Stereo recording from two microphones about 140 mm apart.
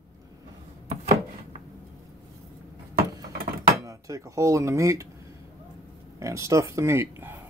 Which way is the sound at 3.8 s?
25° right (ahead or behind).